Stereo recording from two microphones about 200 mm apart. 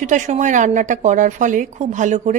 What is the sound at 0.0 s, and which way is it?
Speech, 40° right (ahead or behind).